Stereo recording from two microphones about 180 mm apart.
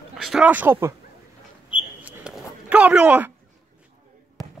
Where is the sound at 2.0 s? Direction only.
5° right (ahead or behind).